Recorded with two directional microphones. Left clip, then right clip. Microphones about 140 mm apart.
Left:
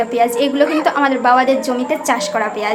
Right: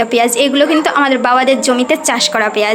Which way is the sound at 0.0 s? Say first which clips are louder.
Right 3 dB; 25° right (ahead or behind).